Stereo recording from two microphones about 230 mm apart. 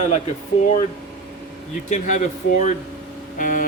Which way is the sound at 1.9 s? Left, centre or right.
Left.